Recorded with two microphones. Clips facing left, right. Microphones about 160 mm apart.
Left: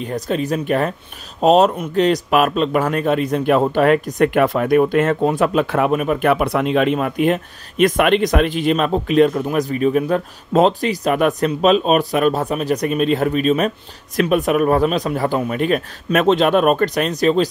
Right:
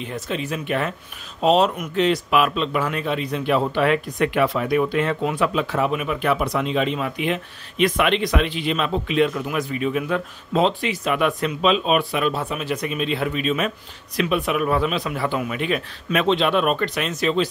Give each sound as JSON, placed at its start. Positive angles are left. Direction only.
{"t": 0.0, "sound": "speech", "side_deg": 40}